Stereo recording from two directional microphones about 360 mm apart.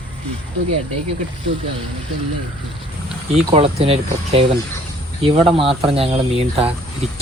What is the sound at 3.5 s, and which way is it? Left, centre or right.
Speech, centre.